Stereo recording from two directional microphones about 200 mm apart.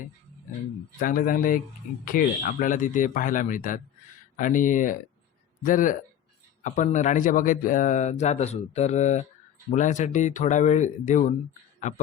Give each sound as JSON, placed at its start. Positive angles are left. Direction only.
{"t": 0.9, "sound": "a man's voice", "side_deg": 45}